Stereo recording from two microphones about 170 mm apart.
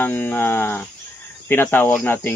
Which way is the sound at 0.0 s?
10° left (ahead or behind).